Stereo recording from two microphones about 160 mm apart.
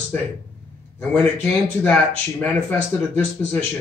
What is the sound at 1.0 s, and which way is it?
A man's voice, 10° left (ahead or behind).